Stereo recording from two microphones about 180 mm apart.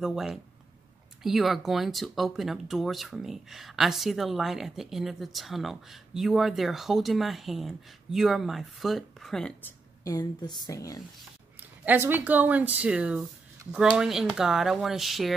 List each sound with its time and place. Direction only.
0.0 s speech: centre (ahead or behind)
10.0 s speech: 20° left (ahead or behind)
11.8 s speech: 10° right (ahead or behind)